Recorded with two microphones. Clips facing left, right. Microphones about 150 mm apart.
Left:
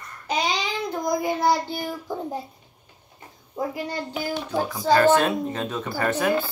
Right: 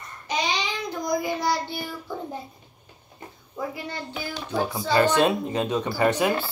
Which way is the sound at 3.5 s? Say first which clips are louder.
Left 4 dB; 40° left (ahead or behind).